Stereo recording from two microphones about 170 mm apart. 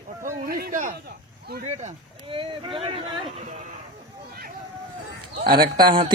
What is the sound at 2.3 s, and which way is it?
Speech, 30° right (ahead or behind).